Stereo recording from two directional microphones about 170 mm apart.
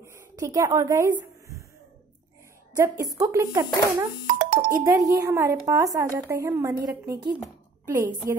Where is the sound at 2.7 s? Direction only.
20° right (ahead or behind).